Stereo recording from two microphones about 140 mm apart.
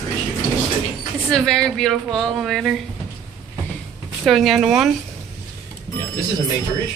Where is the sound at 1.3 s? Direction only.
5° left (ahead or behind).